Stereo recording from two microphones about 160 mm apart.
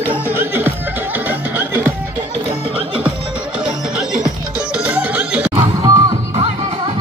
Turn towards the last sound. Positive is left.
turn(degrees=-20)  # may be behind; listen again after turning